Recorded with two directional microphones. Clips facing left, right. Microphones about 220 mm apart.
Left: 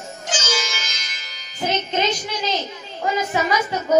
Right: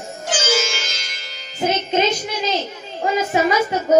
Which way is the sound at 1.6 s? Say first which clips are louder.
Right 3 dB; 10° right (ahead or behind).